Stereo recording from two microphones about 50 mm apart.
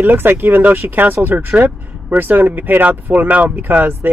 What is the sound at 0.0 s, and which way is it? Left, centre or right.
Speech, right.